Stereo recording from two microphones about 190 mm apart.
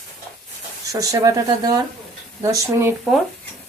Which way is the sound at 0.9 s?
20° right (ahead or behind).